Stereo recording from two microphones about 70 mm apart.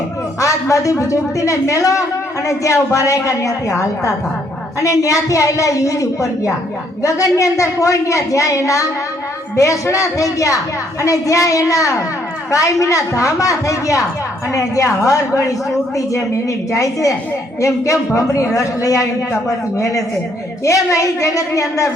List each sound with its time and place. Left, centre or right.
0.3 s a woman's voice: left
16.7 s a woman's voice: left